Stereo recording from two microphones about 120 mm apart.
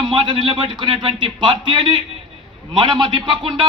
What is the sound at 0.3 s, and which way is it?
A man's voice, 40° right (ahead or behind).